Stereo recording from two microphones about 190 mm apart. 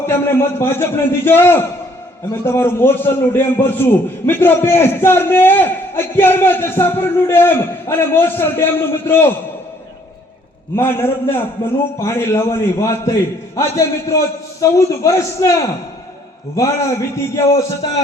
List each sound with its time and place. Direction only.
0.1 s a man's voice: 10° left (ahead or behind)
10.8 s a man's voice: 10° left (ahead or behind)
17.2 s a man's voice: 15° left (ahead or behind)